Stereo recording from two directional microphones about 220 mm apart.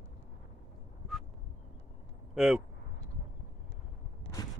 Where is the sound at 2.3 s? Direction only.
Centre (ahead or behind).